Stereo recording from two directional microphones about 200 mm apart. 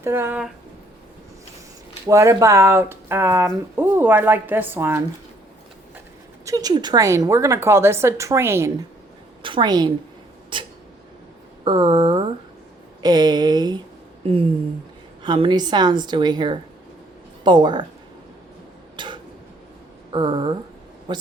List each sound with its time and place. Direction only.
0.0 s speech: 10° right (ahead or behind)
2.0 s speech: 15° right (ahead or behind)
6.4 s speech: 15° right (ahead or behind)
9.4 s a woman's voice: 25° right (ahead or behind)
10.5 s a sound: 25° right (ahead or behind)
11.6 s a woman's voice: 25° right (ahead or behind)
18.9 s a sound: 25° right (ahead or behind)
20.1 s a woman's voice: 25° right (ahead or behind)